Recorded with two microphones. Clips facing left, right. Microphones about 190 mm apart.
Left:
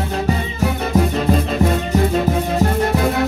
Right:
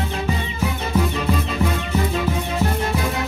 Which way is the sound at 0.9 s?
40° left (ahead or behind).